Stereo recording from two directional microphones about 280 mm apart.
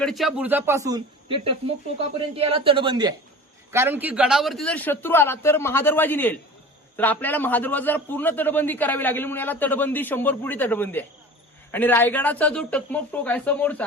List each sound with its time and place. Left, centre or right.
0.0 s a man's voice: centre